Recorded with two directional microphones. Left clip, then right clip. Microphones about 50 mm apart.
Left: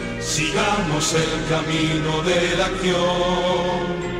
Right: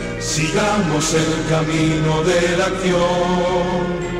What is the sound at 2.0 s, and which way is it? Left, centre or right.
Music, right.